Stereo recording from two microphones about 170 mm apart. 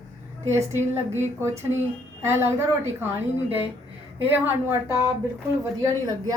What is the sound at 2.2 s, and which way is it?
A woman's voice, 15° right (ahead or behind).